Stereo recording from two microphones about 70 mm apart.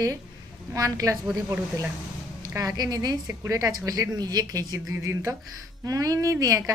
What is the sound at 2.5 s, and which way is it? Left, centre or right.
Speech, right.